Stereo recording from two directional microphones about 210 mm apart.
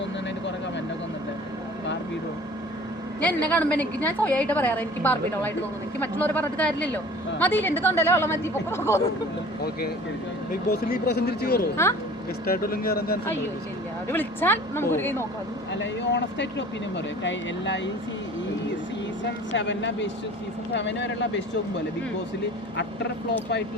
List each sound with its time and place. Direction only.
3.2 s a woman's voice: 5° left (ahead or behind)
10.7 s speech: 50° left (ahead or behind)
14.1 s a woman's voice: 10° left (ahead or behind)
15.7 s speech: 60° left (ahead or behind)
19.5 s speech: 60° left (ahead or behind)